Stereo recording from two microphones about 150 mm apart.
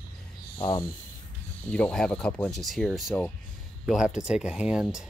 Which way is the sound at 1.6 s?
10° left (ahead or behind).